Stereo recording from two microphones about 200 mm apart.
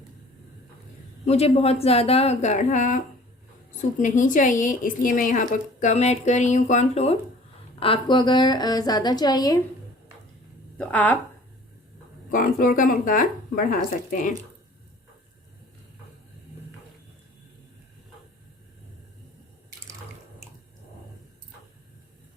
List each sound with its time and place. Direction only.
1.2 s a woman's voice: 30° left (ahead or behind)
10.8 s speech: 5° left (ahead or behind)
12.3 s speech: 45° left (ahead or behind)